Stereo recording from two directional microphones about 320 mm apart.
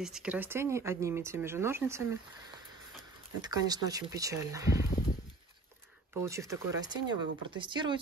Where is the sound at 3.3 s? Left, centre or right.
Centre.